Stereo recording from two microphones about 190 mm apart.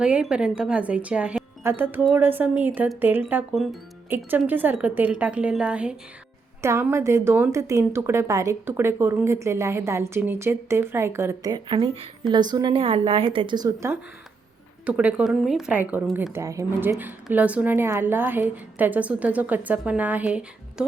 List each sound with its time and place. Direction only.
0.0 s a woman's voice: 5° right (ahead or behind)